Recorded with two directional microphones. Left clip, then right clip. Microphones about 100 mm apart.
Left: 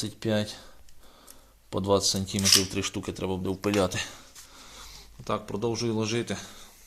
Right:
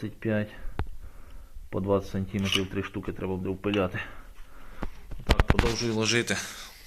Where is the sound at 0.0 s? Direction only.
30° left (ahead or behind).